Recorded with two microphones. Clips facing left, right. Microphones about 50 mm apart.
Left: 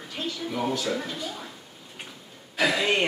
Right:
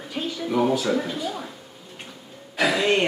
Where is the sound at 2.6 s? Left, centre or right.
Centre.